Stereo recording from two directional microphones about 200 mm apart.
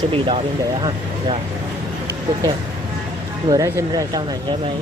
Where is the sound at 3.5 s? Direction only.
20° right (ahead or behind).